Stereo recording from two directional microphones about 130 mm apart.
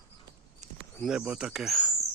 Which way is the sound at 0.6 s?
65° right (ahead or behind).